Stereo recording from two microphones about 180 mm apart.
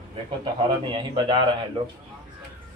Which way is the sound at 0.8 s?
25° right (ahead or behind).